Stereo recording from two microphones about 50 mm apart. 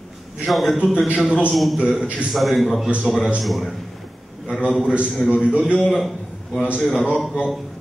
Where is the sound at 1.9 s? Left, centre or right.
Centre.